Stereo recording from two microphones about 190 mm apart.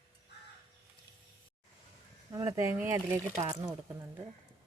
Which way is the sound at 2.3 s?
20° right (ahead or behind).